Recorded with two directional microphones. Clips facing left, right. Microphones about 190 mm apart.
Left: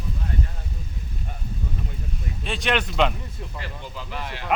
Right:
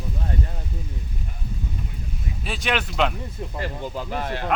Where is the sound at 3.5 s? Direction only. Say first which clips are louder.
Right 8 dB; 45° right (ahead or behind).